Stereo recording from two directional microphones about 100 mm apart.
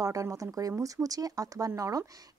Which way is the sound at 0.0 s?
35° right (ahead or behind).